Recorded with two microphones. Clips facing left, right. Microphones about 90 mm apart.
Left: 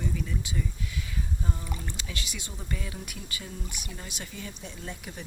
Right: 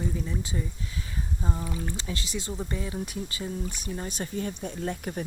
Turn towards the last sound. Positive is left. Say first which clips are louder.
# right 9 dB
turn(degrees=-45)  # may be behind; listen again after turning